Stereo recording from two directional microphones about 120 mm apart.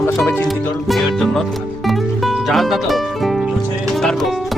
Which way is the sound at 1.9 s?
Centre (ahead or behind).